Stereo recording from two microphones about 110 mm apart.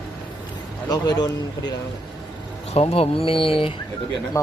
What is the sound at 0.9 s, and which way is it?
Speech, 40° left (ahead or behind).